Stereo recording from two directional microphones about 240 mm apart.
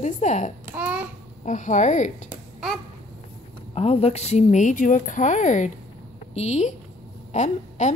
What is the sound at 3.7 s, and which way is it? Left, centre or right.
A woman's voice, left.